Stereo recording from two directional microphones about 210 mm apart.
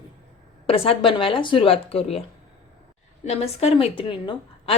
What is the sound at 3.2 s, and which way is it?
A woman's voice, 30° left (ahead or behind).